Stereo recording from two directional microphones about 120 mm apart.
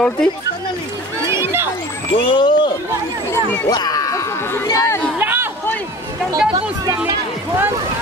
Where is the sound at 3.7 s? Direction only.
35° left (ahead or behind).